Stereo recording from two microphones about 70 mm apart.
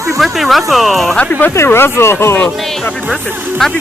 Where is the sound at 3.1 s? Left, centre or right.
Centre.